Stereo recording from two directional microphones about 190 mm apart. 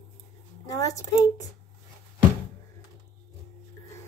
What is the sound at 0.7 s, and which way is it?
Speech, 15° left (ahead or behind).